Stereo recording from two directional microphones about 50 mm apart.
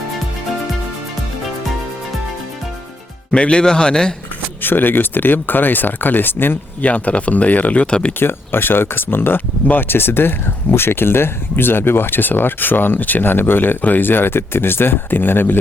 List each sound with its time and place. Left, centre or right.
3.3 s a man's voice: centre
4.6 s speech: left
6.9 s speech: left
8.2 s speech: left